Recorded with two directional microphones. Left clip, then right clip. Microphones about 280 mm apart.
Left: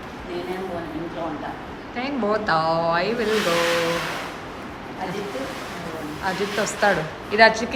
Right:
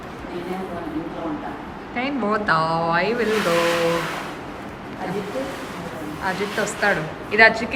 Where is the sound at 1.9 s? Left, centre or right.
Centre.